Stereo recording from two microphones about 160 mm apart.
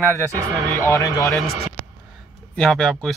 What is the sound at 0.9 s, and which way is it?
Speech, 20° left (ahead or behind).